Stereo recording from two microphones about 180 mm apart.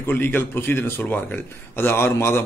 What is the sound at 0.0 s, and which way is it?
Speech, 10° left (ahead or behind).